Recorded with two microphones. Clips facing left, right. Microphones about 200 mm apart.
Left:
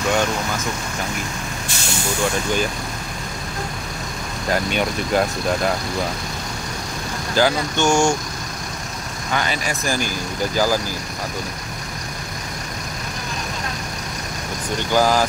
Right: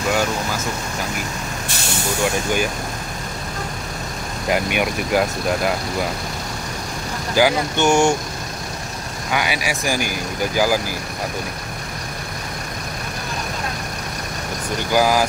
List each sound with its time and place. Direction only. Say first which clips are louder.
4.5 s speech: right 1 dB; 15° right (ahead or behind)
7.3 s speech: right 1 dB; 15° right (ahead or behind)
9.3 s speech: right 1 dB; 10° right (ahead or behind)
14.9 s speech: even; 10° right (ahead or behind)